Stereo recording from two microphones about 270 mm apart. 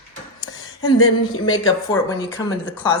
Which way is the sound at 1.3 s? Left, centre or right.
Left.